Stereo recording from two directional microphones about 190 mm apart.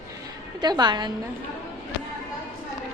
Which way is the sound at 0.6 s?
20° right (ahead or behind).